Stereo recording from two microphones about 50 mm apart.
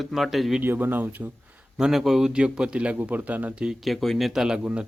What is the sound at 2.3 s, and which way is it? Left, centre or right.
A man's voice, centre.